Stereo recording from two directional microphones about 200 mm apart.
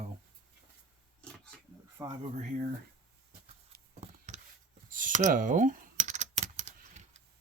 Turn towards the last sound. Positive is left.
turn(degrees=-35)  # may be behind; listen again after turning